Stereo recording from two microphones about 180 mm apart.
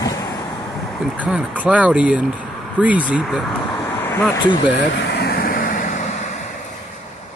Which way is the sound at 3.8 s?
10° left (ahead or behind).